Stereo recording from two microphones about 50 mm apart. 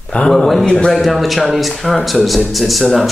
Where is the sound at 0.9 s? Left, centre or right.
Centre.